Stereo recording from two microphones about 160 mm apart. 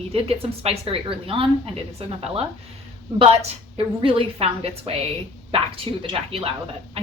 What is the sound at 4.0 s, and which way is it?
A woman's voice, 35° right (ahead or behind).